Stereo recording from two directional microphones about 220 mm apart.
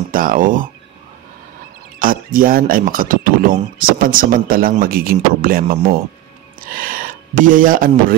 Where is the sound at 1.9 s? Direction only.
40° right (ahead or behind).